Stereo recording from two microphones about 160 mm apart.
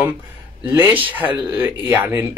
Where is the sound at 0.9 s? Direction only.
30° right (ahead or behind).